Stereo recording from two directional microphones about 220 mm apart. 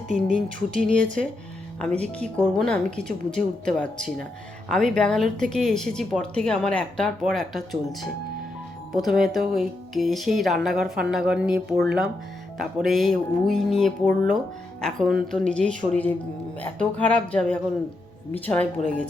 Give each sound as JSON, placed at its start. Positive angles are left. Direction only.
{"t": 0.1, "sound": "speech", "side_deg": 5}
{"t": 0.8, "sound": "speech", "side_deg": -35}
{"t": 1.8, "sound": "speech", "side_deg": 5}
{"t": 9.0, "sound": "speech", "side_deg": 0}